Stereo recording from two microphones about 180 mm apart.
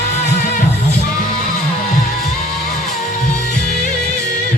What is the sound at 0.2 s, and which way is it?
Music, 45° left (ahead or behind).